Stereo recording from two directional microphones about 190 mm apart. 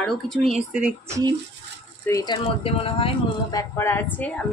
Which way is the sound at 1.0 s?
15° right (ahead or behind).